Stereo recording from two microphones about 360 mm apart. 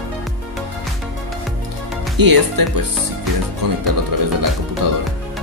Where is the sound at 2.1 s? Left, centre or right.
Right.